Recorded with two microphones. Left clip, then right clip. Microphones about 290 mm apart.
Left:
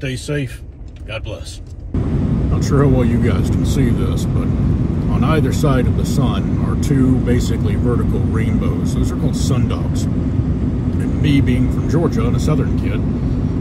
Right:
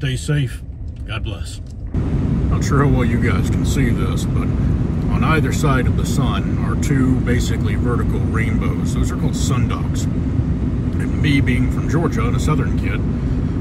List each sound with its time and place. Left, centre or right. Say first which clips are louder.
2.7 s speech: left 3 dB; centre
5.2 s speech: left 1 dB; centre
11.2 s speech: left 1 dB; centre